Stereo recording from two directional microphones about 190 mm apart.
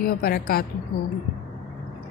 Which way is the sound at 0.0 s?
50° left (ahead or behind).